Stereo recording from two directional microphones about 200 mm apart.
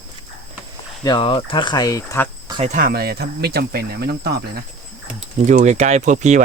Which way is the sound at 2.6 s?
45° right (ahead or behind).